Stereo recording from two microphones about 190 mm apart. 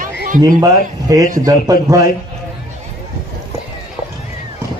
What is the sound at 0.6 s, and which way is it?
Speech, 20° right (ahead or behind).